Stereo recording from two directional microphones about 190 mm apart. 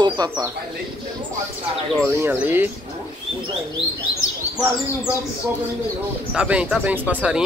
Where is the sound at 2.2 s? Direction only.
10° right (ahead or behind).